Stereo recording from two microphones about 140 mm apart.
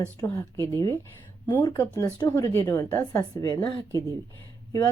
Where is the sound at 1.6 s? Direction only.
20° left (ahead or behind).